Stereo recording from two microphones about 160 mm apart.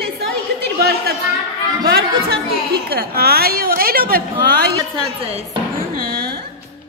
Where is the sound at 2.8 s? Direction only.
75° right (ahead or behind).